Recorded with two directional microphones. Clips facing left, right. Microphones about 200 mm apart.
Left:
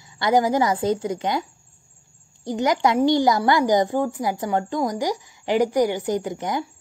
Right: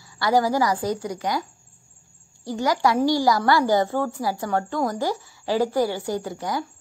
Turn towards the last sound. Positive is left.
turn(degrees=20)  # may be behind; listen again after turning